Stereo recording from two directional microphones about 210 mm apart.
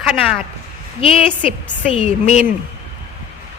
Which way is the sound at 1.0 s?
25° left (ahead or behind).